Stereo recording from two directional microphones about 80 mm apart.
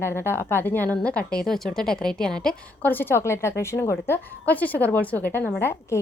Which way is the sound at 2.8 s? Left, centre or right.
Left.